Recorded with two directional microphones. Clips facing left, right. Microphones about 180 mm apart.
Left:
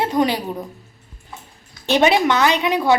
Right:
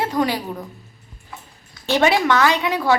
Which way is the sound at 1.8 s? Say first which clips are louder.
Left 2 dB; 20° left (ahead or behind).